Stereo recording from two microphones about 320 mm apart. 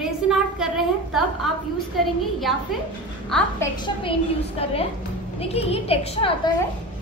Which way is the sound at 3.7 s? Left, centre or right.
Centre.